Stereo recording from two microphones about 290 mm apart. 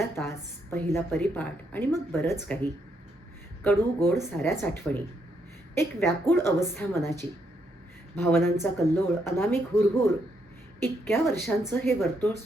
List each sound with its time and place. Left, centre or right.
0.0 s a woman's voice: centre